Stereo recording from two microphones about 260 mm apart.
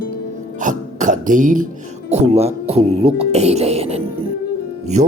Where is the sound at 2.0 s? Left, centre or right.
Right.